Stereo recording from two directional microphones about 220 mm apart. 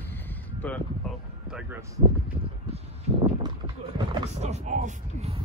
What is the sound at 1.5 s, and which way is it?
Speech, 5° right (ahead or behind).